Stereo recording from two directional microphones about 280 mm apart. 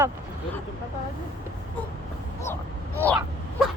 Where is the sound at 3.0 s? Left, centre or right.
Centre.